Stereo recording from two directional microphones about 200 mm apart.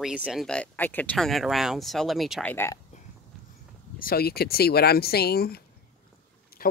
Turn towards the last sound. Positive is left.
turn(degrees=50)  # may be behind; listen again after turning